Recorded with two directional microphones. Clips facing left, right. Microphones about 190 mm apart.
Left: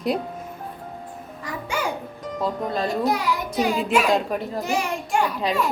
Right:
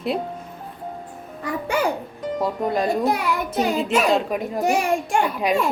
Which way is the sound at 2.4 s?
15° right (ahead or behind).